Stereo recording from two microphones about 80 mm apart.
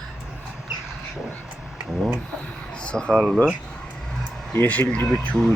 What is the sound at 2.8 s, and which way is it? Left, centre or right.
Speech, centre.